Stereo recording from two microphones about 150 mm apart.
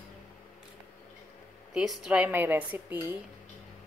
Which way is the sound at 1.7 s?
5° right (ahead or behind).